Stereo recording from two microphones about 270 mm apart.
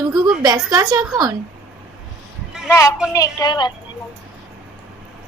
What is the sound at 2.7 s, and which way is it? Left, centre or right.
A woman's voice, centre.